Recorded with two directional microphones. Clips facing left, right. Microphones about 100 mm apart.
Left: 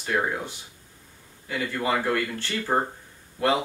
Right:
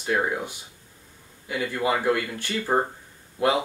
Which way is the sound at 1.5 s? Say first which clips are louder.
Right 1 dB; 10° right (ahead or behind).